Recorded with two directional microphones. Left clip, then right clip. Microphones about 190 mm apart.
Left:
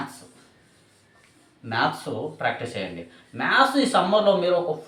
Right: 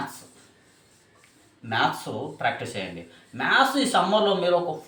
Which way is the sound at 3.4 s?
15° left (ahead or behind).